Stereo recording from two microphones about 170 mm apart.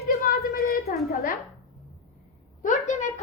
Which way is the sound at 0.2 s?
60° left (ahead or behind).